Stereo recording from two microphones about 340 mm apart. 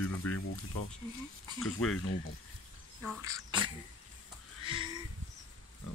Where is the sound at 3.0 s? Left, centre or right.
Centre.